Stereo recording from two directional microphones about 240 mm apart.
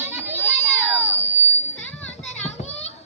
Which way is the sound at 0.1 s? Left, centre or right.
Centre.